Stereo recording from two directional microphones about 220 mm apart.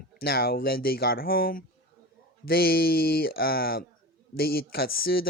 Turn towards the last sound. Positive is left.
turn(degrees=45)  # may be behind; listen again after turning